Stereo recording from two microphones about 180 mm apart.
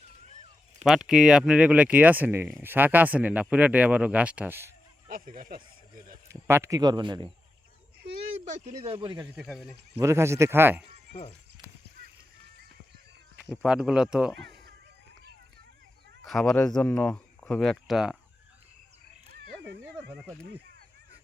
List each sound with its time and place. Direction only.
0.9 s speech: centre (ahead or behind)
5.0 s speech: 50° right (ahead or behind)
6.2 s speech: 15° right (ahead or behind)
8.4 s speech: 40° right (ahead or behind)
9.3 s speech: centre (ahead or behind)
10.0 s speech: 15° right (ahead or behind)
11.1 s speech: 35° left (ahead or behind)
13.4 s speech: centre (ahead or behind)
16.2 s speech: centre (ahead or behind)
19.4 s cat: 65° right (ahead or behind)
20.1 s speech: 5° left (ahead or behind)